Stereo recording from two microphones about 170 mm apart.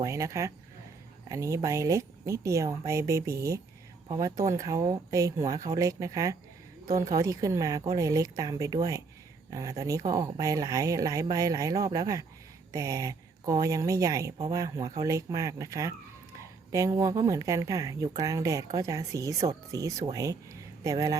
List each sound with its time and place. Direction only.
0.0 s a woman's voice: 20° right (ahead or behind)